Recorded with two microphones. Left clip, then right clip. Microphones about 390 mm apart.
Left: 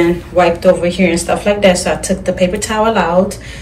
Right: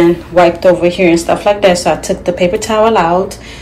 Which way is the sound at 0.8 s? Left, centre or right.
Centre.